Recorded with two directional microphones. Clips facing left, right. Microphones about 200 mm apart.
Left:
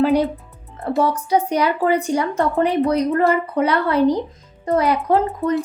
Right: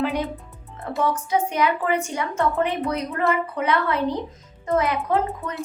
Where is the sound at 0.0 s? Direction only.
35° left (ahead or behind).